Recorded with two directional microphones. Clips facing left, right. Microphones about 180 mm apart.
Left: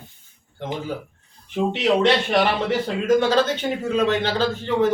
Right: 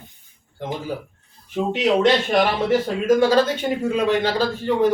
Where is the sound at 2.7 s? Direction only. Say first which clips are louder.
Right 2 dB; 10° right (ahead or behind).